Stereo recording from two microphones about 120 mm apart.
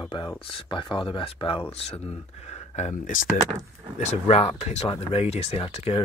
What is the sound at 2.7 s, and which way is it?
Speech, 70° left (ahead or behind).